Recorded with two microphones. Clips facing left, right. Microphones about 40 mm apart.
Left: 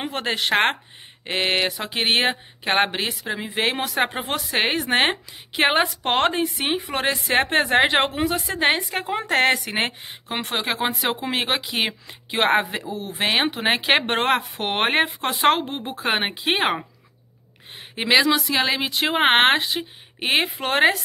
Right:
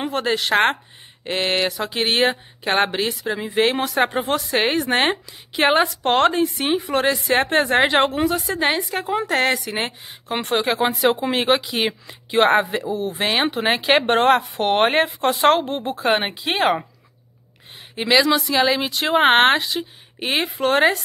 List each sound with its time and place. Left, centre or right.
0.0 s a woman's voice: left
8.5 s a woman's voice: left
10.3 s a woman's voice: centre; by 16.7 s left
17.9 s a woman's voice: left
18.2 s speech: centre; by 20.4 s left
20.4 s speech: centre